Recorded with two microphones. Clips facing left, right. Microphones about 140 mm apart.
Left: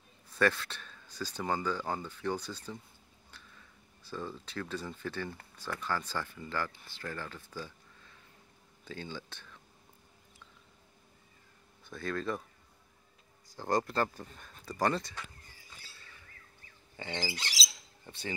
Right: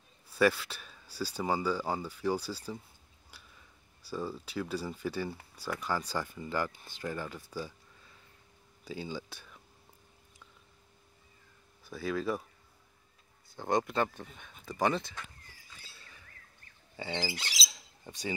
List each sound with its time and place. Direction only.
0.3 s speech: 10° right (ahead or behind)
8.8 s speech: 10° right (ahead or behind)
11.8 s speech: 5° right (ahead or behind)
13.6 s speech: centre (ahead or behind)
16.9 s squawk: 10° right (ahead or behind)